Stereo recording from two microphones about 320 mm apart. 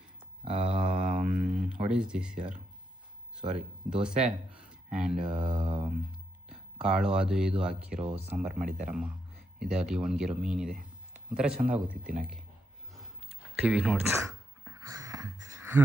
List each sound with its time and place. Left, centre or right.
0.5 s mantra: centre
1.2 s a sound: right
1.9 s speech: centre
3.4 s speech: right
3.8 s speech: centre
7.9 s speech: centre
8.3 s speech: centre
13.6 s a sound: centre